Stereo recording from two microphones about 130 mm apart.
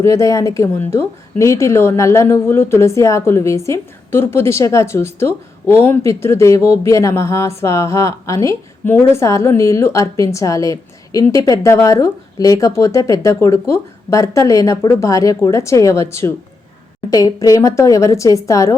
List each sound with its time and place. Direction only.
0.0 s a woman's voice: 25° left (ahead or behind)